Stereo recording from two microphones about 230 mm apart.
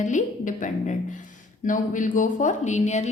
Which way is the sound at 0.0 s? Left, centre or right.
Left.